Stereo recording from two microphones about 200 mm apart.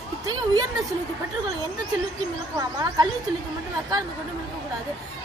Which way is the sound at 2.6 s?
20° right (ahead or behind).